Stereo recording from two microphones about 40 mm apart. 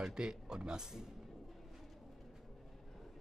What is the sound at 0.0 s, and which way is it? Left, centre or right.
Speech, centre.